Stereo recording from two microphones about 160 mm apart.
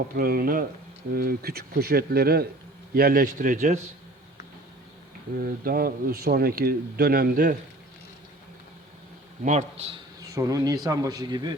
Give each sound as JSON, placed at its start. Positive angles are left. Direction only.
{"t": 0.2, "sound": "a man's voice", "side_deg": -65}
{"t": 5.3, "sound": "a man's voice", "side_deg": -65}
{"t": 9.4, "sound": "a man's voice", "side_deg": -50}
{"t": 10.2, "sound": "a man's voice", "side_deg": -20}